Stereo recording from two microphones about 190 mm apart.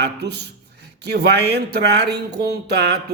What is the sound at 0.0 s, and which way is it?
A man's voice, 60° right (ahead or behind).